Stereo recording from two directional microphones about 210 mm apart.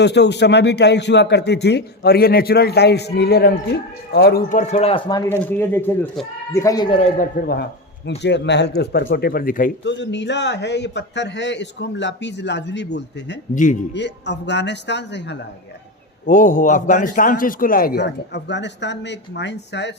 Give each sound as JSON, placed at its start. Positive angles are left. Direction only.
{"t": 0.0, "sound": "speech", "side_deg": 55}
{"t": 5.4, "sound": "speech", "side_deg": 10}
{"t": 7.2, "sound": "speech", "side_deg": 45}
{"t": 9.8, "sound": "a man's voice", "side_deg": 55}
{"t": 13.5, "sound": "speech", "side_deg": 40}
{"t": 13.9, "sound": "a man's voice", "side_deg": 55}
{"t": 16.2, "sound": "speech", "side_deg": 40}